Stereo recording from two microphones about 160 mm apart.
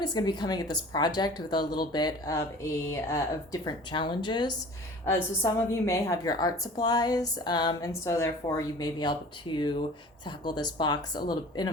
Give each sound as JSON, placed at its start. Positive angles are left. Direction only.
{"t": 0.0, "sound": "a woman's voice", "side_deg": 25}
{"t": 5.0, "sound": "a woman's voice", "side_deg": 20}